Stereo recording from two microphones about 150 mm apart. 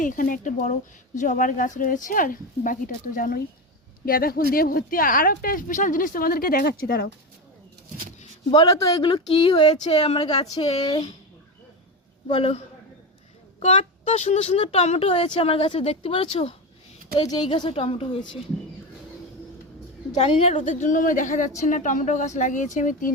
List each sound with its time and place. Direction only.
0.0 s a woman's voice: 60° left (ahead or behind); by 7.1 s 85° left
8.4 s a woman's voice: 35° left (ahead or behind)
10.8 s speech: 30° left (ahead or behind)
12.3 s a woman's voice: 40° left (ahead or behind)
17.2 s a woman's voice: 30° left (ahead or behind)
20.1 s a woman's voice: 45° left (ahead or behind); by 23.1 s 60° left (ahead or behind)